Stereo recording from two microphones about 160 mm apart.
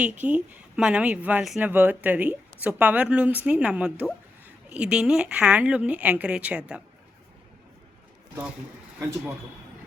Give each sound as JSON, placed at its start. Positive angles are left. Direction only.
{"t": 0.0, "sound": "a woman's voice", "side_deg": -10}
{"t": 9.0, "sound": "a woman's voice", "side_deg": -15}